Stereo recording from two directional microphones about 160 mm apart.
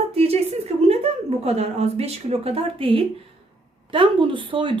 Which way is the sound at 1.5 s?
40° right (ahead or behind).